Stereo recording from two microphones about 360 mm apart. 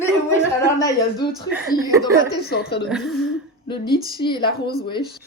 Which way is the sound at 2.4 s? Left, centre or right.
Left.